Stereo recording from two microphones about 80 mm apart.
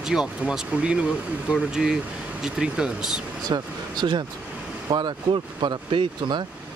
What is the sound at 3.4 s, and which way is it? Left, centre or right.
Speech, right.